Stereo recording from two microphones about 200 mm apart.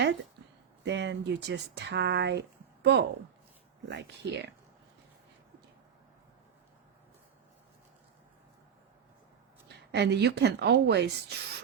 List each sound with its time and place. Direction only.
0.0 s a sound: 70° right (ahead or behind)
0.9 s speech: 60° right (ahead or behind)
9.9 s speech: 55° right (ahead or behind)